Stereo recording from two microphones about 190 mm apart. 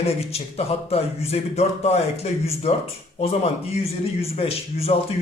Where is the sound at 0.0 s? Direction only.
35° left (ahead or behind).